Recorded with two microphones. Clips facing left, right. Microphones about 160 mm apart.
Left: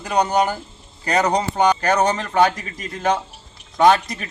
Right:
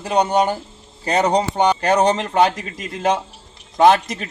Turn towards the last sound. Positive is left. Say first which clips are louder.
# right 2 dB
turn(degrees=-25)  # may be behind; listen again after turning